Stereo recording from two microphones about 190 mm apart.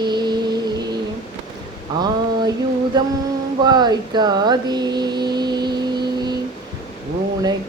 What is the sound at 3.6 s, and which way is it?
Speech, 20° right (ahead or behind).